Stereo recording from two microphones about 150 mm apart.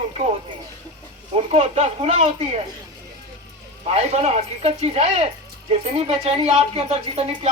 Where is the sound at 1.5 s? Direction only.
45° right (ahead or behind).